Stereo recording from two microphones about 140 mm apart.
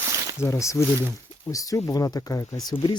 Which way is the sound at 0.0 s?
20° right (ahead or behind).